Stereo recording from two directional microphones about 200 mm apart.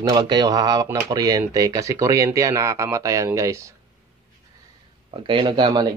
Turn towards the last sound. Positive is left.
turn(degrees=-25)  # may be behind; listen again after turning